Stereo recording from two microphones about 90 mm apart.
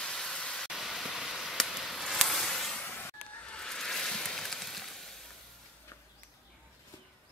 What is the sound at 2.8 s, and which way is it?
Vehicle, 20° left (ahead or behind).